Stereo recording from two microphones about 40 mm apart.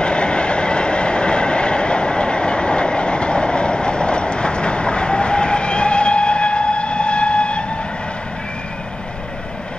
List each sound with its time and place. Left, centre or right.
0.0 s train: left